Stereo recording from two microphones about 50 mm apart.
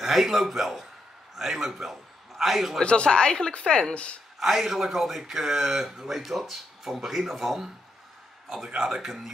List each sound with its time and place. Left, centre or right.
0.0 s a man's voice: centre
2.8 s a woman's voice: left
4.4 s speech: centre